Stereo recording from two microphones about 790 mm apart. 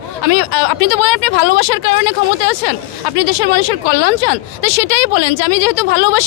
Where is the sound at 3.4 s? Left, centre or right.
Left.